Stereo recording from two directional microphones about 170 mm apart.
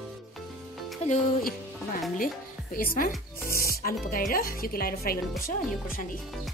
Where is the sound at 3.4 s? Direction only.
15° left (ahead or behind).